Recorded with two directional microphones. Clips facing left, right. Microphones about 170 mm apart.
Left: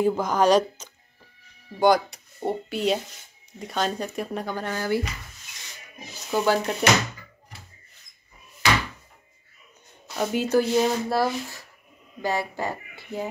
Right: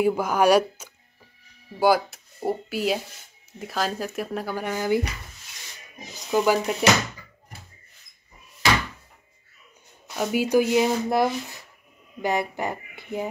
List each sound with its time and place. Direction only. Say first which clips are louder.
0.0 s speech: right 1 dB; 10° right (ahead or behind)
10.1 s speech: right 1 dB; 5° right (ahead or behind)